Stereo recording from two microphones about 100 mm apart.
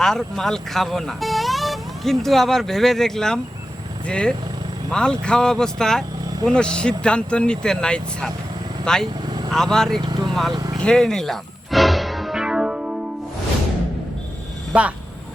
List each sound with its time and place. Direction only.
0.0 s speech: 5° left (ahead or behind)
9.2 s vehicle: 45° right (ahead or behind)
9.5 s speech: 5° left (ahead or behind)
10.0 s vehicle: 50° right (ahead or behind)
10.5 s speech: 35° right (ahead or behind)
10.8 s music: 5° left (ahead or behind)
14.7 s speech: 15° right (ahead or behind)